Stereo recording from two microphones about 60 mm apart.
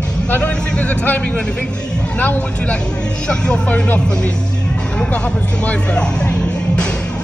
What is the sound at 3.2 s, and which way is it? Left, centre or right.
Speech, centre.